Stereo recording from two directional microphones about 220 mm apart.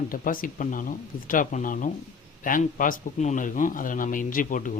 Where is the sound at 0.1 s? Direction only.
40° left (ahead or behind).